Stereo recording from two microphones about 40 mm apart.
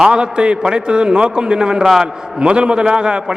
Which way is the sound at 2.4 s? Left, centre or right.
Right.